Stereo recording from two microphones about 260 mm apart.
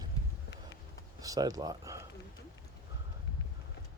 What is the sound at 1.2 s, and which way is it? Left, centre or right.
Speech, centre.